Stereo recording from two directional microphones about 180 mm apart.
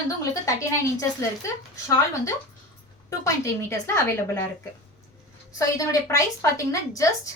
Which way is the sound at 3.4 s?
15° left (ahead or behind).